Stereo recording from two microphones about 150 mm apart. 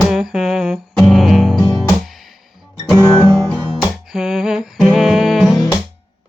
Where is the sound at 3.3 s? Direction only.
5° left (ahead or behind).